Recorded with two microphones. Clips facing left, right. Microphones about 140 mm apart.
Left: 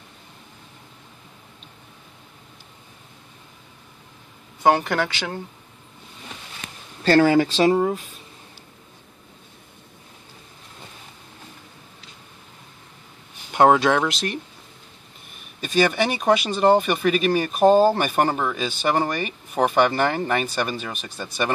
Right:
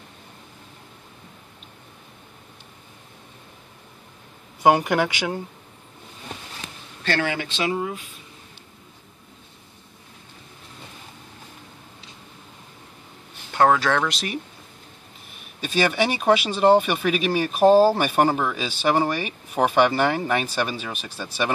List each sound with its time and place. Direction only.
4.6 s speech: 15° right (ahead or behind)
7.0 s speech: 35° left (ahead or behind)
13.5 s speech: 20° left (ahead or behind)
14.0 s speech: centre (ahead or behind)
15.6 s speech: centre (ahead or behind)